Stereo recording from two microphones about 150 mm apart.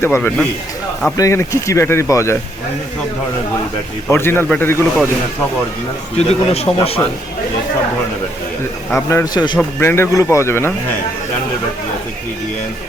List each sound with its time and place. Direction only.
0.0 s speech: 15° left (ahead or behind)
4.1 s speech: 15° left (ahead or behind)
6.1 s a man's voice: 45° left (ahead or behind)
8.9 s speech: 15° left (ahead or behind)
9.6 s speech: 15° left (ahead or behind)